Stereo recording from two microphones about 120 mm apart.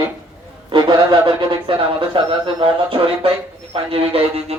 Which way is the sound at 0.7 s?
40° right (ahead or behind).